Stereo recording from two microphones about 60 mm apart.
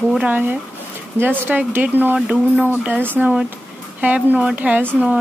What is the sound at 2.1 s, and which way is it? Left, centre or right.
Speech, centre.